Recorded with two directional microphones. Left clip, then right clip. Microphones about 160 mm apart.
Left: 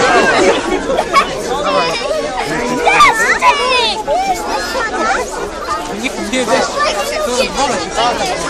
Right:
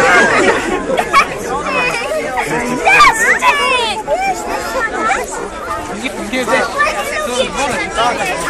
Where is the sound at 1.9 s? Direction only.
10° left (ahead or behind).